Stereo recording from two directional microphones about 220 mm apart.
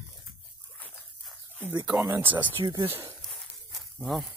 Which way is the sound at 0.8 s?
10° left (ahead or behind).